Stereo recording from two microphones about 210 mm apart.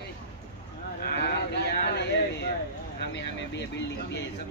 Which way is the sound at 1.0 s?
45° left (ahead or behind).